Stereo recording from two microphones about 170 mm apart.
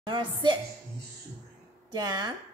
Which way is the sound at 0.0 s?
25° right (ahead or behind).